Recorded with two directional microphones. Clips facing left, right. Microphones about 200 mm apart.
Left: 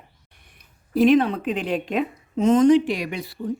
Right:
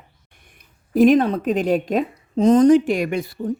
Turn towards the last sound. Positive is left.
turn(degrees=-50)  # may be behind; listen again after turning